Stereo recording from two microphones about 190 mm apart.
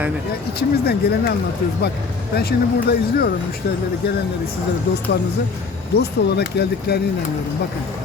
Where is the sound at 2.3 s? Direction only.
55° left (ahead or behind).